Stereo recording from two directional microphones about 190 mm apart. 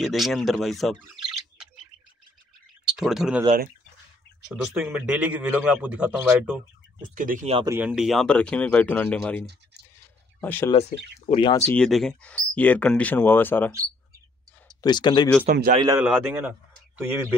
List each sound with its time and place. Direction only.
0.0 s speech: centre (ahead or behind)
3.0 s speech: centre (ahead or behind)
4.5 s a man's voice: 5° right (ahead or behind)
7.2 s speech: 45° right (ahead or behind)
7.5 s speech: 20° right (ahead or behind)
7.8 s speech: 5° right (ahead or behind)
10.4 s speech: 10° left (ahead or behind)
11.2 s speech: 25° left (ahead or behind)
11.7 s speech: 5° left (ahead or behind)
14.8 s speech: 20° left (ahead or behind)
15.8 s a man's voice: 15° right (ahead or behind)